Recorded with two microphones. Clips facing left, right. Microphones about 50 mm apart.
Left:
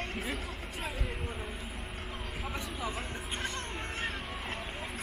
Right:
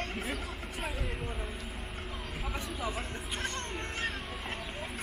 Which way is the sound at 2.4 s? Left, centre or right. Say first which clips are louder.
Right 1 dB; centre.